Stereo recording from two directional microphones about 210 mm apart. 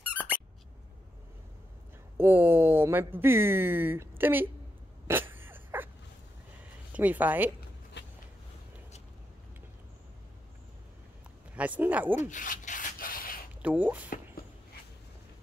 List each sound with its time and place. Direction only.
2.1 s speech: 10° right (ahead or behind)
5.0 s a sound: 10° right (ahead or behind)
8.0 s a sound: 55° left (ahead or behind)
11.5 s speech: 5° right (ahead or behind)
12.2 s rub: 35° left (ahead or behind)
13.6 s speech: 5° right (ahead or behind)